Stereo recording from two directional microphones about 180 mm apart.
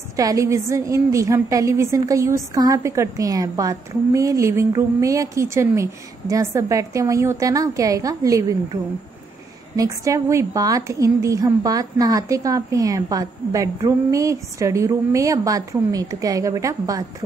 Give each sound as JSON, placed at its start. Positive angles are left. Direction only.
{"t": 0.1, "sound": "a woman's voice", "side_deg": -20}
{"t": 9.8, "sound": "a woman's voice", "side_deg": -15}